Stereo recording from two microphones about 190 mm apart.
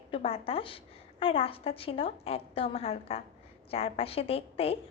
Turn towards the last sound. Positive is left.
turn(degrees=30)  # may be behind; listen again after turning